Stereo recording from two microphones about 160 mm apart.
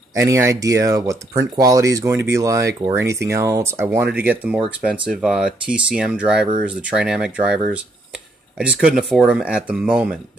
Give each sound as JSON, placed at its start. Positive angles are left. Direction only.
{"t": 0.1, "sound": "speech", "side_deg": -20}